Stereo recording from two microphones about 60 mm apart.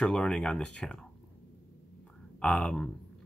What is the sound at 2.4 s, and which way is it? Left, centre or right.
Speech, centre.